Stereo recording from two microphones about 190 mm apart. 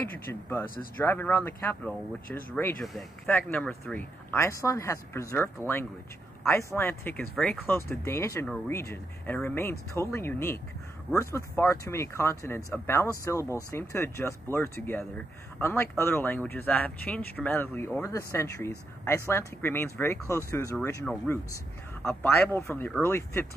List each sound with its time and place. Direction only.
0.1 s speech: 10° left (ahead or behind)